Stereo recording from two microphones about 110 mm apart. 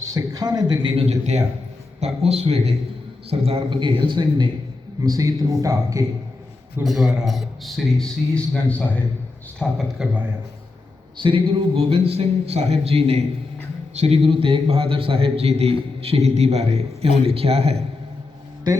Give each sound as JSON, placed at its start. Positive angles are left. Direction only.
{"t": 0.0, "sound": "a man's voice", "side_deg": -30}
{"t": 1.0, "sound": "a man's voice", "side_deg": -85}
{"t": 2.0, "sound": "a man's voice", "side_deg": -75}
{"t": 5.0, "sound": "a man's voice", "side_deg": -35}
{"t": 6.8, "sound": "a man's voice", "side_deg": 0}
{"t": 10.0, "sound": "a man's voice", "side_deg": -5}
{"t": 11.2, "sound": "a man's voice", "side_deg": -50}
{"t": 13.9, "sound": "speech", "side_deg": -90}
{"t": 14.4, "sound": "a man's voice", "side_deg": -55}